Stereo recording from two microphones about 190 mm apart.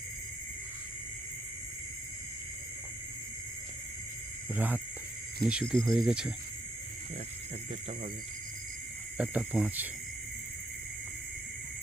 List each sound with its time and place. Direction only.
4.5 s speech: 10° right (ahead or behind)
9.1 s speech: 5° right (ahead or behind)